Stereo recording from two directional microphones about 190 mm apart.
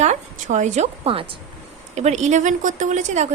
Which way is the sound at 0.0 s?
40° right (ahead or behind).